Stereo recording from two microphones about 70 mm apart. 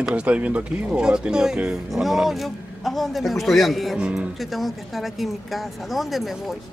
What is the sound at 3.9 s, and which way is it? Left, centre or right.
Speech, centre.